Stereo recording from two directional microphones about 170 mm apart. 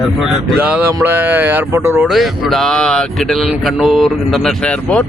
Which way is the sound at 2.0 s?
Centre (ahead or behind).